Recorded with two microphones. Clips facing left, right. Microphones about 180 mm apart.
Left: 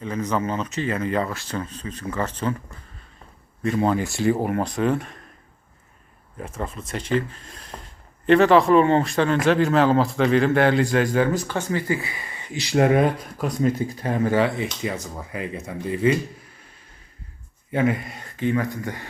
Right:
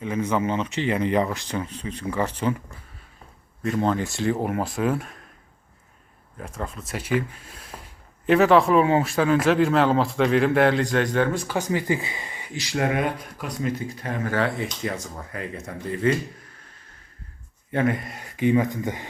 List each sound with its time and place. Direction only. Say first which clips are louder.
0.3 s speech: even; 20° right (ahead or behind)
3.6 s speech: left 2 dB; centre (ahead or behind)
6.4 s speech: left 2 dB; 5° left (ahead or behind)
11.5 s speech: even; 15° right (ahead or behind)
12.5 s speech: left 6 dB; 25° left (ahead or behind)
13.4 s speech: left 6 dB; 40° left (ahead or behind)
14.3 s speech: left 4 dB; 15° left (ahead or behind)
14.8 s speech: left 1 dB; 5° left (ahead or behind)
17.7 s speech: left 1 dB; 5° left (ahead or behind)
18.2 s speech: right 6 dB; 15° right (ahead or behind)